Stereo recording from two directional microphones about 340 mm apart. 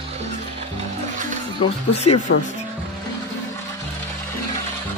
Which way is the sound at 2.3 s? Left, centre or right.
Left.